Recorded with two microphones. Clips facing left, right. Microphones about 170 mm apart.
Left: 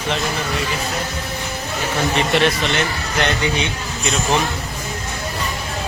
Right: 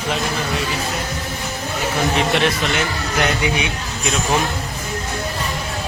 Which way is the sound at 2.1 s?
Centre (ahead or behind).